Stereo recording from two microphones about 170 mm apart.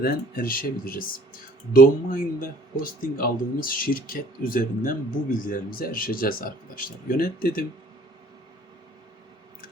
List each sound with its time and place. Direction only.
0.0 s speech: 60° left (ahead or behind)